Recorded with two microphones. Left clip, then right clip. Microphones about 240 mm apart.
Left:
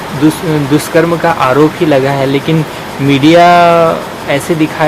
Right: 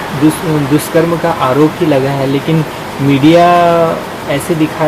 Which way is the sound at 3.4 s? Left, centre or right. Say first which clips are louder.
Left 3 dB; centre.